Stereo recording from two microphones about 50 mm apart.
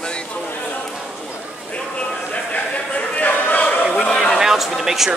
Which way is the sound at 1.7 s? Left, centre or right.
Left.